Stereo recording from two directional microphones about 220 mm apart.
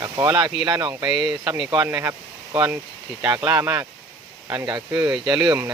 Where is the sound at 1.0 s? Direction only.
Centre (ahead or behind).